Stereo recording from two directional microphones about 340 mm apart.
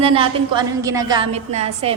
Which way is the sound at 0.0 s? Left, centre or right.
Centre.